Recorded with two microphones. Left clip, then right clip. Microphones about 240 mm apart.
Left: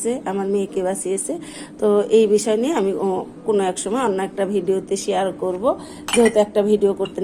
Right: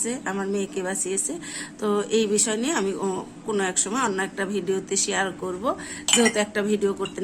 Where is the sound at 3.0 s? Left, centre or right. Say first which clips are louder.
Left 6 dB; right.